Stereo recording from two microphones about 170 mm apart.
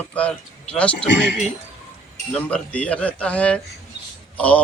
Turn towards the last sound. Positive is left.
turn(degrees=10)  # may be behind; listen again after turning